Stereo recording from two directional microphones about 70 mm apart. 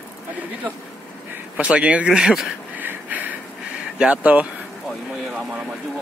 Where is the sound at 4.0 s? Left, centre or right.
Centre.